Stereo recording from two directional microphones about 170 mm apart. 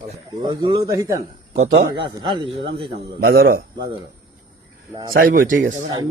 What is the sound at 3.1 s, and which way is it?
Speech, 65° right (ahead or behind).